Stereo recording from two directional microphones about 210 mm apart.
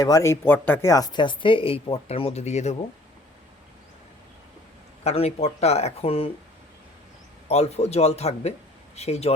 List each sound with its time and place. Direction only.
0.0 s speech: 15° left (ahead or behind); by 2.7 s 30° left (ahead or behind)
5.0 s speech: 30° left (ahead or behind)
7.4 s speech: 30° left (ahead or behind)